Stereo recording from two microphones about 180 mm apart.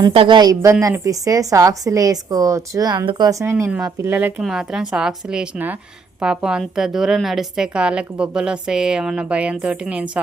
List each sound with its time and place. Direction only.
0.0 s a woman's voice: 30° right (ahead or behind); by 10.1 s 5° right (ahead or behind)